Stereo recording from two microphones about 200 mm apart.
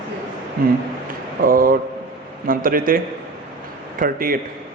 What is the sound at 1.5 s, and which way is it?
A man's voice, 45° right (ahead or behind).